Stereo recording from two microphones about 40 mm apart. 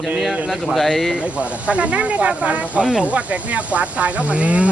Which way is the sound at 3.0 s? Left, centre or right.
Right.